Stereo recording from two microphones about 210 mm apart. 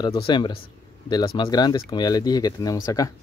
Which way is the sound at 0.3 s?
25° left (ahead or behind).